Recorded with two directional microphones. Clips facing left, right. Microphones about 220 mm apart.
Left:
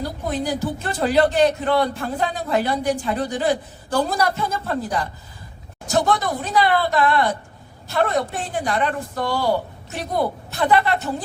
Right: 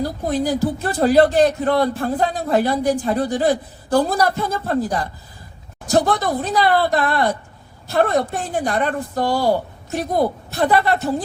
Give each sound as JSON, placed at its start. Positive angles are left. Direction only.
{"t": 0.0, "sound": "speech", "side_deg": -35}